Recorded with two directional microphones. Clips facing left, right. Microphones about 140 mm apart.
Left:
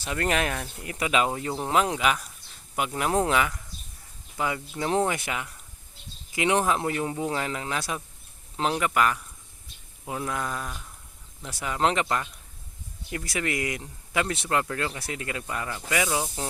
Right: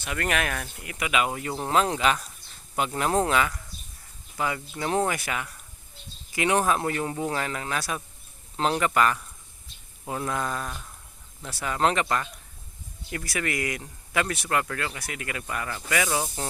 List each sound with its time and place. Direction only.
0.0 s speech: 30° left (ahead or behind)
1.5 s speech: 10° left (ahead or behind)
8.5 s speech: 10° left (ahead or behind)